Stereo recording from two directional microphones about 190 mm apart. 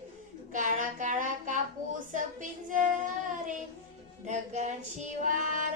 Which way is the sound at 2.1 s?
45° right (ahead or behind).